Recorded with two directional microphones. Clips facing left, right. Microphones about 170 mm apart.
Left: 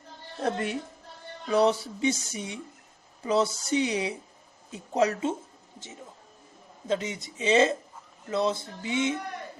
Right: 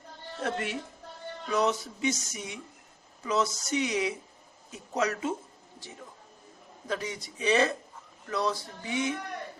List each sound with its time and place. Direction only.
0.4 s speech: 35° left (ahead or behind)
6.8 s speech: 20° left (ahead or behind)